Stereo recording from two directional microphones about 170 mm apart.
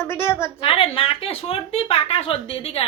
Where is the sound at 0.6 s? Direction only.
35° left (ahead or behind).